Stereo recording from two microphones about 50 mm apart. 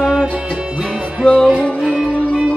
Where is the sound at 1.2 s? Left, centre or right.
Left.